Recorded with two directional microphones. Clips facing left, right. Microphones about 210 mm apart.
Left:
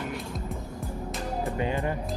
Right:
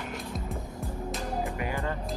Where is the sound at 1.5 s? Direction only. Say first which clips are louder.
Left 4 dB; 20° left (ahead or behind).